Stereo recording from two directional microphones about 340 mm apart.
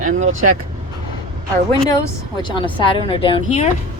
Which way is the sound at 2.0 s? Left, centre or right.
Centre.